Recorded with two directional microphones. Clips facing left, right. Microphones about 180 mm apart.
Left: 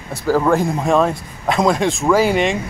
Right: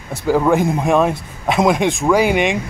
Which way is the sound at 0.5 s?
15° right (ahead or behind).